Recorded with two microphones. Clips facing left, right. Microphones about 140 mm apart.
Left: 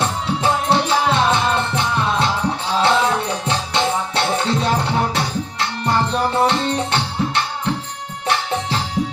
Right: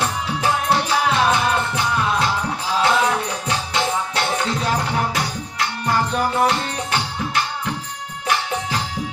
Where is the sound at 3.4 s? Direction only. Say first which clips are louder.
Left 2 dB; 25° left (ahead or behind).